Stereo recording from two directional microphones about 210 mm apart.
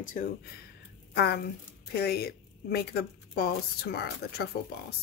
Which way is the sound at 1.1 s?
50° left (ahead or behind).